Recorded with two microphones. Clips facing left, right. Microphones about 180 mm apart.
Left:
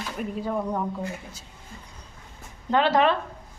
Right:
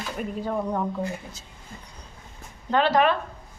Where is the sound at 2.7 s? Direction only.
20° left (ahead or behind).